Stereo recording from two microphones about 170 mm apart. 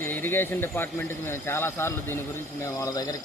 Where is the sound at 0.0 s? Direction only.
10° left (ahead or behind).